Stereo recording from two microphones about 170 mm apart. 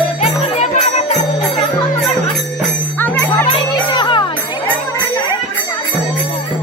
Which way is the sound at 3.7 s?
25° left (ahead or behind).